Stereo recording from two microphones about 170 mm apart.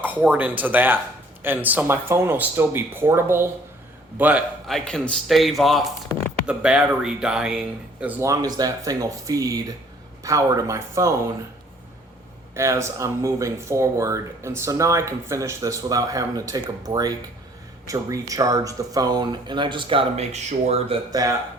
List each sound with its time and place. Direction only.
0.0 s speech: 10° right (ahead or behind)
4.9 s speech: 5° left (ahead or behind)
8.2 s speech: 20° right (ahead or behind)
12.5 s speech: 15° right (ahead or behind); by 21.0 s 35° right (ahead or behind)
21.1 s speech: 20° right (ahead or behind)